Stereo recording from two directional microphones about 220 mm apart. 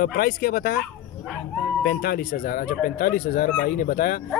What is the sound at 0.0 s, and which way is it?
Speech, 45° left (ahead or behind).